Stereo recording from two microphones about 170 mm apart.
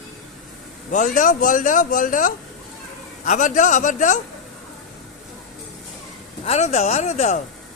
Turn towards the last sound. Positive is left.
turn(degrees=40)  # may be behind; listen again after turning